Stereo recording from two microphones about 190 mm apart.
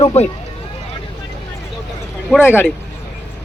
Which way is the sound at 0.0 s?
35° left (ahead or behind).